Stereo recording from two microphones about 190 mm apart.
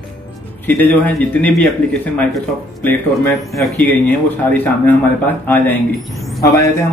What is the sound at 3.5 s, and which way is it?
Speech, 5° left (ahead or behind).